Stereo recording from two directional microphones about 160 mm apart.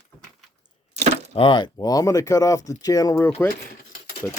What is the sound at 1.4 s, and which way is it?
Speech, 30° left (ahead or behind).